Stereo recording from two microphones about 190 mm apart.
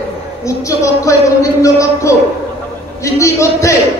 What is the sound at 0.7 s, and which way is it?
A man's voice, 15° left (ahead or behind).